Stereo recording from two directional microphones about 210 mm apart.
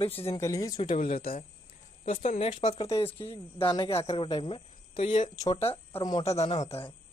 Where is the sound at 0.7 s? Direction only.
35° left (ahead or behind).